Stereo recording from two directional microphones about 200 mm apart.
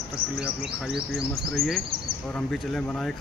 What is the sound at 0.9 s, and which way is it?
Speech, centre (ahead or behind).